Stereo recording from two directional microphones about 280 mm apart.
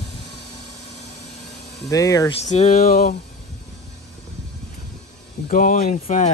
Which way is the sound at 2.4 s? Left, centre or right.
Left.